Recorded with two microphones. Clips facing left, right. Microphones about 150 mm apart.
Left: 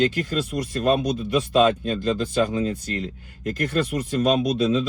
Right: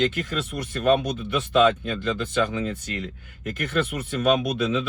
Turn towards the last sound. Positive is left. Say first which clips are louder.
# left 4 dB
turn(degrees=35)  # may be behind; listen again after turning